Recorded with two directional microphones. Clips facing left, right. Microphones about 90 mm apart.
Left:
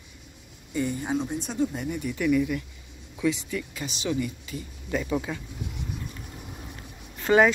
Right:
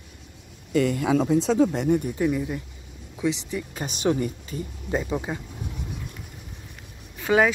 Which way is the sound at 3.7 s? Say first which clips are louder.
Right 9 dB; 45° right (ahead or behind).